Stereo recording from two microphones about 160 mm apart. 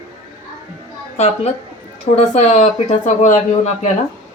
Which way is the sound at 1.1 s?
40° left (ahead or behind).